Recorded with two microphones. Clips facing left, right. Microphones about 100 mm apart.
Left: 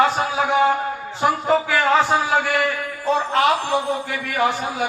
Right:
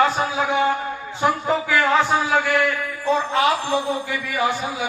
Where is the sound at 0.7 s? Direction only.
30° left (ahead or behind).